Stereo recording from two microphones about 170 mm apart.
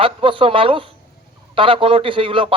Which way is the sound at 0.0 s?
30° right (ahead or behind).